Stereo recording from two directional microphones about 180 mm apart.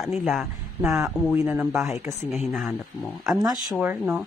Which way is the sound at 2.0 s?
20° right (ahead or behind).